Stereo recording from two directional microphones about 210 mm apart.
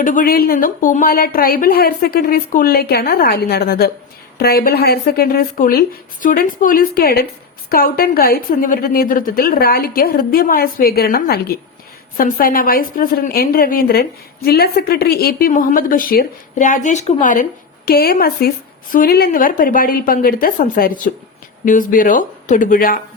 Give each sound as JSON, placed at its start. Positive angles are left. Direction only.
{"t": 0.0, "sound": "a woman's voice", "side_deg": 40}